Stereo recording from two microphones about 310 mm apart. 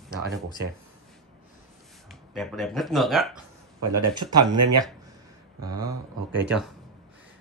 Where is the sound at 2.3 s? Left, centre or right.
Centre.